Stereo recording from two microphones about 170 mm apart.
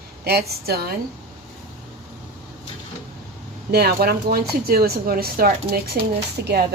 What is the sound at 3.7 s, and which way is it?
Speech, 70° right (ahead or behind).